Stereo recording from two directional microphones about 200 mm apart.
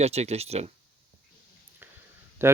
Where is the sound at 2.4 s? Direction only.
10° right (ahead or behind).